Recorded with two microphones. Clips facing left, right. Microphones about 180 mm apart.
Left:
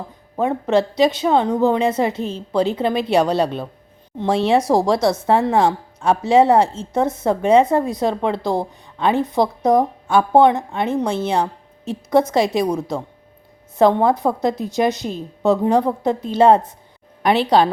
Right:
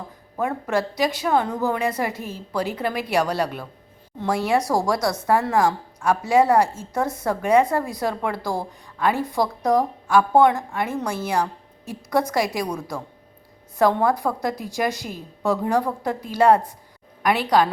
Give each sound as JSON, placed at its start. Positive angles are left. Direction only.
{"t": 0.3, "sound": "a woman's voice", "side_deg": 20}